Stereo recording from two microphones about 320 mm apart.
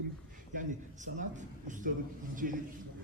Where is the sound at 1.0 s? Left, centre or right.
Right.